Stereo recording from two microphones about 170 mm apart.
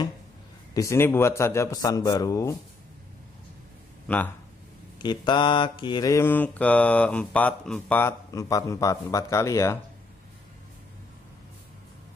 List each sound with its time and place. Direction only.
0.7 s mantra: 15° left (ahead or behind)
4.1 s mantra: 5° left (ahead or behind)
5.0 s mantra: 25° left (ahead or behind)